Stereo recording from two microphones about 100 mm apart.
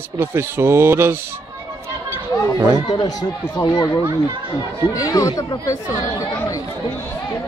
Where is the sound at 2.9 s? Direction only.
40° left (ahead or behind).